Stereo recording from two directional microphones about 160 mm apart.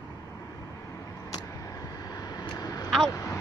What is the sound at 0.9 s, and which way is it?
Vehicle, 20° left (ahead or behind).